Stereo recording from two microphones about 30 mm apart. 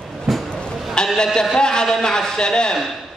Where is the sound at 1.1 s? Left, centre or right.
Left.